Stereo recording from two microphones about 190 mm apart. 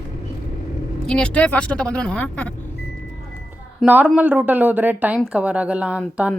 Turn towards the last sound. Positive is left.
turn(degrees=-5)  # may be behind; listen again after turning